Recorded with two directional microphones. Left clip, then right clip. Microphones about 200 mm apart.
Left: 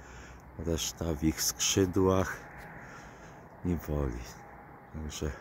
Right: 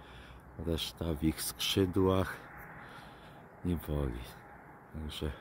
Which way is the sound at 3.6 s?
5° right (ahead or behind).